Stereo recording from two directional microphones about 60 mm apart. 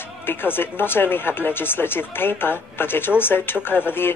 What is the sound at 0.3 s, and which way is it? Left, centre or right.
Speech, left.